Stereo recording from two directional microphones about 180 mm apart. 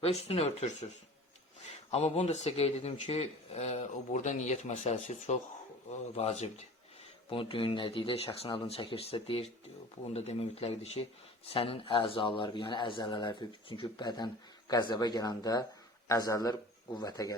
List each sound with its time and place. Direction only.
0.0 s speech: 35° left (ahead or behind)
1.9 s a man's voice: 35° left (ahead or behind)